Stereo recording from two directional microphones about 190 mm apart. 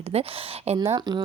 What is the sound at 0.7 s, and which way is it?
Speech, 20° right (ahead or behind).